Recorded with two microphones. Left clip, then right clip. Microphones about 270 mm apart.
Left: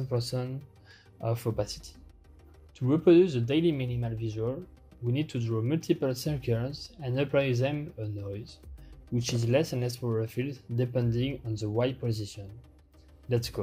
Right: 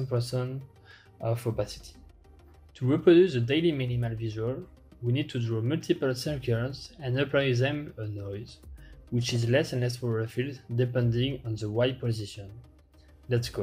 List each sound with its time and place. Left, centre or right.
0.1 s speech: centre